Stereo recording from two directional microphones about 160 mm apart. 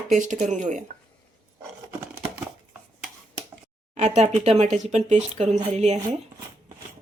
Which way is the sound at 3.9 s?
45° right (ahead or behind).